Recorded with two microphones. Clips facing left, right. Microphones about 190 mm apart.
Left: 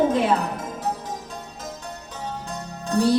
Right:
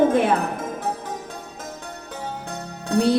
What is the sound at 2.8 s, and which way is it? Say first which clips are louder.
Music: right 1 dB; 60° right (ahead or behind).